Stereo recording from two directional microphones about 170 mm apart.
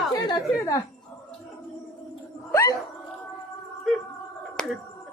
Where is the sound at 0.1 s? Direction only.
25° left (ahead or behind).